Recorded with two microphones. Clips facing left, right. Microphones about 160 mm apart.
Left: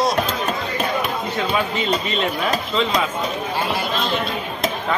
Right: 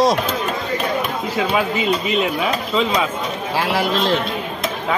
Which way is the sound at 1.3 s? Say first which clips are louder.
Right 4 dB; 10° right (ahead or behind).